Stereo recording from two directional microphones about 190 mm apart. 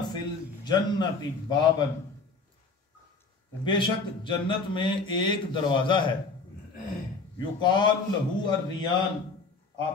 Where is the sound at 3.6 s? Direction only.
25° left (ahead or behind).